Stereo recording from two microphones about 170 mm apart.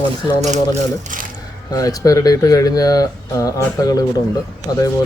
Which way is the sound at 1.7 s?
20° left (ahead or behind).